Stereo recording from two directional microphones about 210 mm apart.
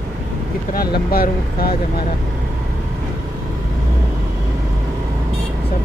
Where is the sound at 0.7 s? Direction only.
45° left (ahead or behind).